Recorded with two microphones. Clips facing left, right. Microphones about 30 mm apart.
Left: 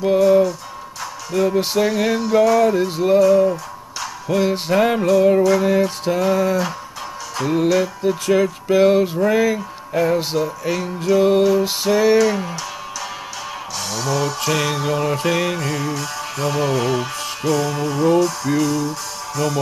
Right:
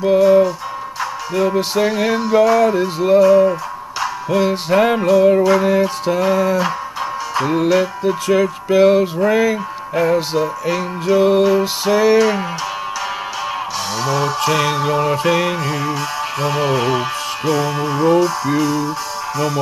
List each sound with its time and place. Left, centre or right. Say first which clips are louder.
0.0 s music: right 2 dB; centre
5.4 s music: right 2 dB; centre
5.7 s music: right 2 dB; centre
12.2 s music: right 2 dB; centre
13.9 s music: right 3 dB; centre